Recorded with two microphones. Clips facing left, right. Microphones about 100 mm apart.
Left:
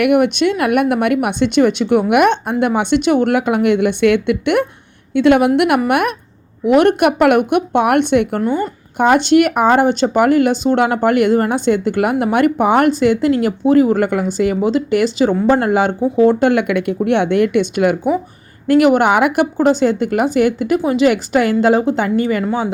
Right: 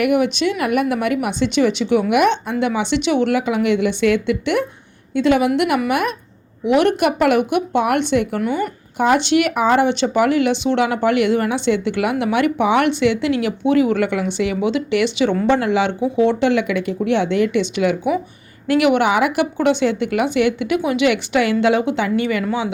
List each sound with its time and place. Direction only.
0.0 s a woman's voice: 55° left (ahead or behind)
19.5 s speech: 40° left (ahead or behind)